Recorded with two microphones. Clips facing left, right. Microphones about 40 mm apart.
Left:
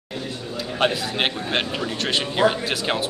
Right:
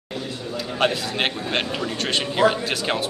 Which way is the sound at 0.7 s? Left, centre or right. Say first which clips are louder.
Even; centre.